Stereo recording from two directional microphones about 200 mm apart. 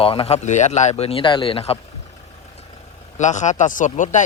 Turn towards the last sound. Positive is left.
turn(degrees=40)  # may be behind; listen again after turning